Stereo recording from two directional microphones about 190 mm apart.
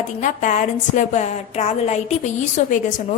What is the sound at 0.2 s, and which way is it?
A woman's voice, 40° left (ahead or behind).